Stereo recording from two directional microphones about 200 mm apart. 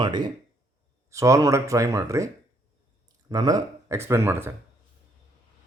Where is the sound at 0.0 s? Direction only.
20° right (ahead or behind).